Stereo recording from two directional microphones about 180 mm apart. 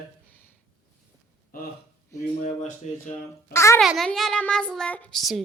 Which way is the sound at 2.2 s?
40° left (ahead or behind).